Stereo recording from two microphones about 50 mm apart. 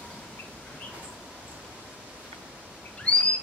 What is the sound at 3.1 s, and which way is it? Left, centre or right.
Bird, left.